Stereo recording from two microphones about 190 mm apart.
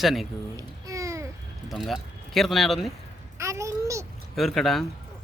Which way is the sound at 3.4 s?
15° right (ahead or behind).